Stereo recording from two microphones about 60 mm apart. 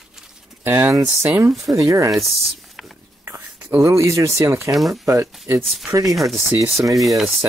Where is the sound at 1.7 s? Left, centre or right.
Right.